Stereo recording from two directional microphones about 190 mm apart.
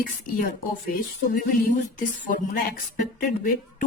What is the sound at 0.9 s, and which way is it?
A woman's voice, 50° left (ahead or behind).